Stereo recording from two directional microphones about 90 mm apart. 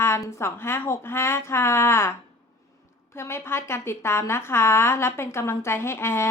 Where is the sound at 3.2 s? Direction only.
30° left (ahead or behind).